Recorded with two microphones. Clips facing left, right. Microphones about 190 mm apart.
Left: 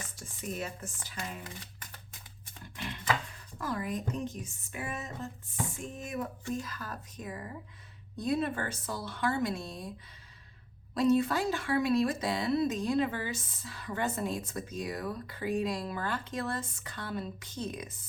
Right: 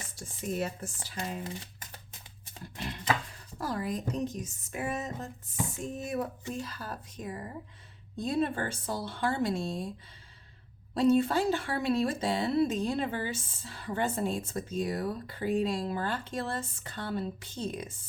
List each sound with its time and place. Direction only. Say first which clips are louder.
0.5 s speech: right 6 dB; 35° right (ahead or behind)
2.7 s a sound: right 1 dB; 35° right (ahead or behind)
3.6 s speech: right 1 dB; 35° right (ahead or behind)
10.9 s speech: right 2 dB; 25° right (ahead or behind)